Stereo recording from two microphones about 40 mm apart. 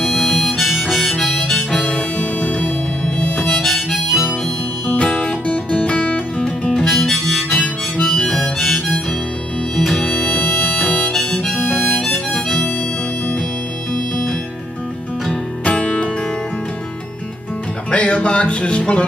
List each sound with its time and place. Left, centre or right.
0.0 s harmonica: centre
1.8 s harmonica: left
3.6 s harmonica: centre
4.9 s music: left
6.6 s harmonica: centre
8.5 s harmonica: centre
9.9 s music: left
10.4 s music: left
11.1 s harmonica: centre
15.6 s music: left
17.9 s music: left